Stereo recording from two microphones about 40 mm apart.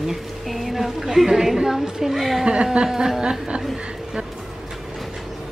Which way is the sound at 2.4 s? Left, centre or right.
Right.